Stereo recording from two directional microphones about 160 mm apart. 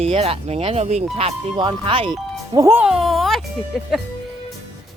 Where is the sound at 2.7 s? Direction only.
10° right (ahead or behind).